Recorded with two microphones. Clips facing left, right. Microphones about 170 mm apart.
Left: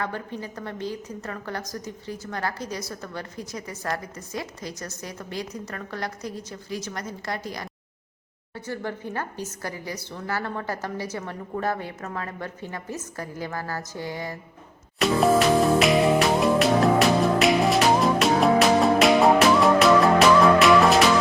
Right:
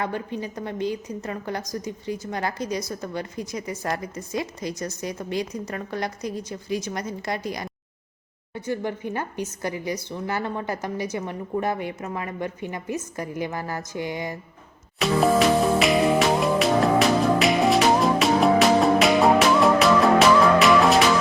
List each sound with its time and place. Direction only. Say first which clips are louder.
0.0 s a woman's voice: right 3 dB; 15° right (ahead or behind)
14.9 s music: even; centre (ahead or behind)